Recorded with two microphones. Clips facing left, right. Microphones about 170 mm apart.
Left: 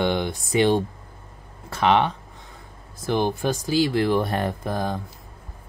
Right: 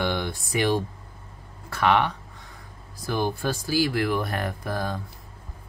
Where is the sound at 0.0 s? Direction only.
20° left (ahead or behind).